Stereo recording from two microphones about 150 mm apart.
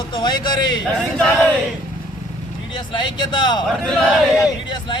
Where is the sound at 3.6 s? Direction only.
Centre (ahead or behind).